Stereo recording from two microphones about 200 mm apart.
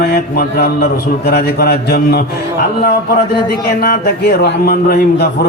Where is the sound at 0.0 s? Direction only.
50° left (ahead or behind).